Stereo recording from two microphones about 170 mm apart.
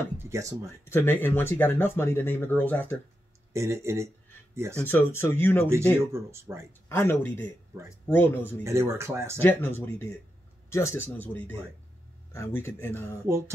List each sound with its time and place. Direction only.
0.2 s speech: 20° right (ahead or behind)
0.8 s speech: 15° left (ahead or behind)
3.5 s speech: 15° right (ahead or behind)
4.7 s speech: 10° left (ahead or behind)
5.7 s speech: 15° right (ahead or behind)
6.9 s speech: 15° left (ahead or behind)
8.6 s speech: 15° right (ahead or behind)
9.4 s speech: 15° left (ahead or behind)
13.3 s speech: 15° right (ahead or behind)